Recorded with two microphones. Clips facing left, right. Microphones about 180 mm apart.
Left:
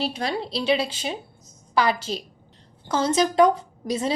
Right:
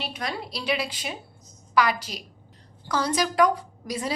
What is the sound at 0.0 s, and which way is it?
A woman's voice, 30° left (ahead or behind).